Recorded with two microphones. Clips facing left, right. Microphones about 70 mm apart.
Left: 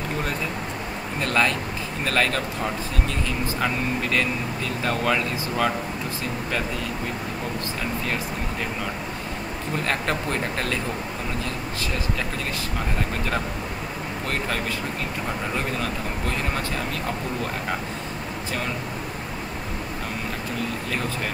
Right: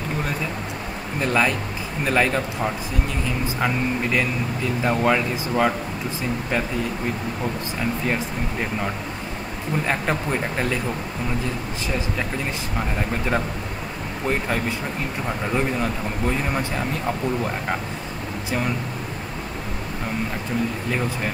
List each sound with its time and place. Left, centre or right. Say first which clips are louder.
1.2 s speech: right 2 dB; centre
9.8 s speech: right 1 dB; centre
15.5 s speech: right 4 dB; centre